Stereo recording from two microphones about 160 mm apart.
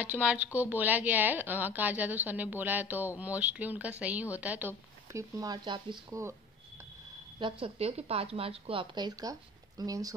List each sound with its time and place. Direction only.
0.0 s a woman's voice: 10° right (ahead or behind)
5.4 s speech: 25° right (ahead or behind)
7.3 s speech: 35° right (ahead or behind)